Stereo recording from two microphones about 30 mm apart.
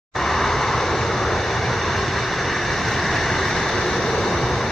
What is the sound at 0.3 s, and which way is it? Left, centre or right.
Vehicle, centre.